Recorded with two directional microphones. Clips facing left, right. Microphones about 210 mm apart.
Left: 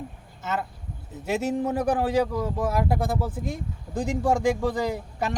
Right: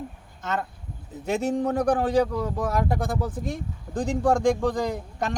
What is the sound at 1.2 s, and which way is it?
Speech, 5° left (ahead or behind).